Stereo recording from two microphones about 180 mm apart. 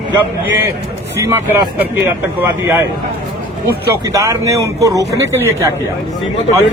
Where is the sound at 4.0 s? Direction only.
20° right (ahead or behind).